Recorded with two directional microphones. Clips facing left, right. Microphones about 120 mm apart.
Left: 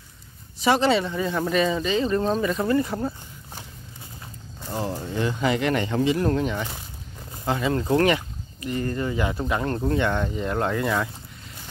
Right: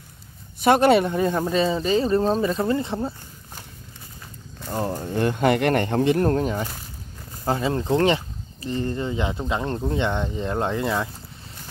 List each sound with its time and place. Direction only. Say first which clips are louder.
0.6 s speech: right 4 dB; 55° right (ahead or behind)
1.5 s speech: right 2 dB; 30° right (ahead or behind)
5.0 s speech: right 5 dB; 50° right (ahead or behind); by 11.1 s 20° right (ahead or behind)